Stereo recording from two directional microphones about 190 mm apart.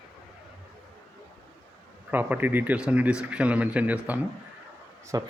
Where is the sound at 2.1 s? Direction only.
10° right (ahead or behind).